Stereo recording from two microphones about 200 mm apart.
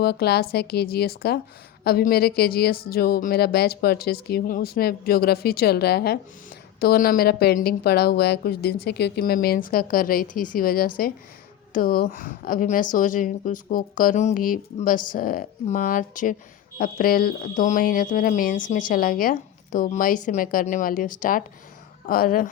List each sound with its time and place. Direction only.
0.0 s speech: 50° left (ahead or behind)